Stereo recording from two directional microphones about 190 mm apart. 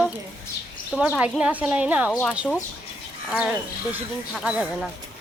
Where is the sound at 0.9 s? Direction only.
5° right (ahead or behind).